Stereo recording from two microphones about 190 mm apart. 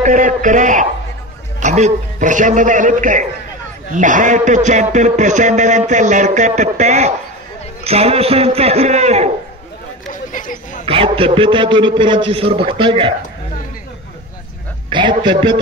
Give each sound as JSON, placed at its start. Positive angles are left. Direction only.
{"t": 0.0, "sound": "a man's voice", "side_deg": -40}
{"t": 10.3, "sound": "a sound", "side_deg": 45}
{"t": 10.9, "sound": "a man's voice", "side_deg": -30}
{"t": 14.9, "sound": "a man's voice", "side_deg": -25}